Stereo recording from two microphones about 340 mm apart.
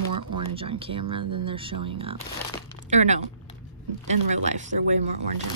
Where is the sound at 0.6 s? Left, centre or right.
Centre.